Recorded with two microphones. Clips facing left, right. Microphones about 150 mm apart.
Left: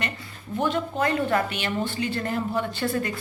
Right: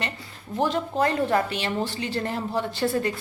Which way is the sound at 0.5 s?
35° right (ahead or behind).